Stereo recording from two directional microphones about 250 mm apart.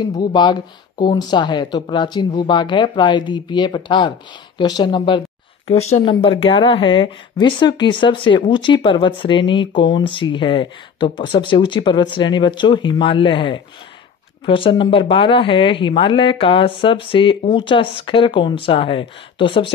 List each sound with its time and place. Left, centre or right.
0.2 s speech: centre